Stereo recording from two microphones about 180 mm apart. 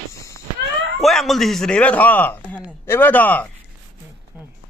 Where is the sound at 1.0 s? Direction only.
Centre (ahead or behind).